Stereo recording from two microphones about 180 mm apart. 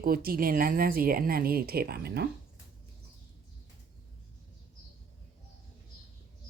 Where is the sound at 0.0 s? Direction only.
55° right (ahead or behind).